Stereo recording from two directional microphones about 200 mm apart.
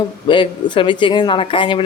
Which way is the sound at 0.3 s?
25° left (ahead or behind).